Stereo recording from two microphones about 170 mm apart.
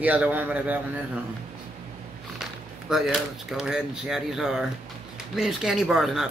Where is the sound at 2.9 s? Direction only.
Centre (ahead or behind).